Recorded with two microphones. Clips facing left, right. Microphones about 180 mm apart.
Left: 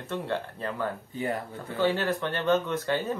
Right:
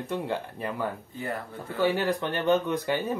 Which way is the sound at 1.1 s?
15° left (ahead or behind).